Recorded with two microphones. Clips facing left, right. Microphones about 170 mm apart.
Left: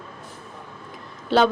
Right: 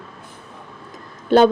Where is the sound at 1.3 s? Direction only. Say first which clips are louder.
Right 6 dB; 50° right (ahead or behind).